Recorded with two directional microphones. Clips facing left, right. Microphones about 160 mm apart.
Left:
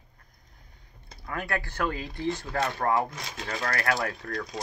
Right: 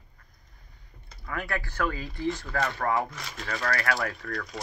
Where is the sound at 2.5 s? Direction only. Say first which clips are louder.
Left 3 dB; 30° left (ahead or behind).